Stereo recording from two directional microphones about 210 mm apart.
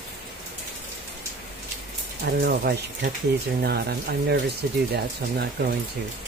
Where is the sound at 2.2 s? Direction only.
50° right (ahead or behind).